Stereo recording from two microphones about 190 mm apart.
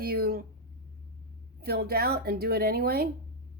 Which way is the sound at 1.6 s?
55° right (ahead or behind).